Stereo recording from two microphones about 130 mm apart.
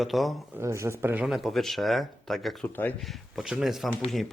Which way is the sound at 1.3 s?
Centre (ahead or behind).